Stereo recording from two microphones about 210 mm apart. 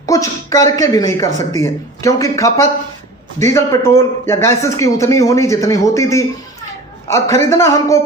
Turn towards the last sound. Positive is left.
turn(degrees=15)  # may be behind; listen again after turning